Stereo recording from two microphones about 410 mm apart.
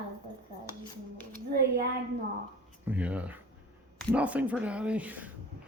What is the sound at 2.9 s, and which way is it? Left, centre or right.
Speech, centre.